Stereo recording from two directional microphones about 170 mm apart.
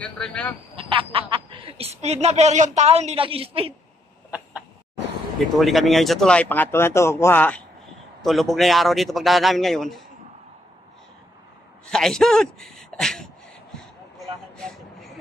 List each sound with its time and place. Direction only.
0.0 s speech: 5° left (ahead or behind)
0.7 s speech: 30° right (ahead or behind)
5.6 s a man's voice: centre (ahead or behind)
11.8 s speech: 5° left (ahead or behind)
14.6 s a sound: 5° left (ahead or behind)